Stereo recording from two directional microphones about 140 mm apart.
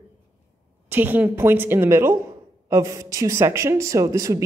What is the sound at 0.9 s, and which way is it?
Speech, 15° right (ahead or behind).